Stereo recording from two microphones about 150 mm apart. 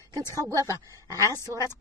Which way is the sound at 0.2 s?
20° left (ahead or behind).